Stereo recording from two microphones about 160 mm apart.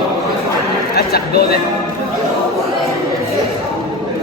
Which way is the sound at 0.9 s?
80° left.